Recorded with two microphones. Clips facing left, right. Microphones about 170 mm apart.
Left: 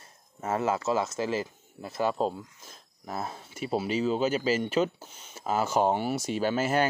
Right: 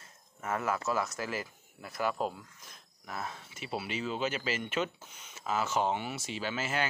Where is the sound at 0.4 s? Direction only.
25° left (ahead or behind).